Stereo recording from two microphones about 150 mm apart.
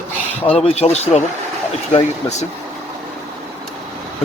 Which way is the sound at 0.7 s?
45° left (ahead or behind).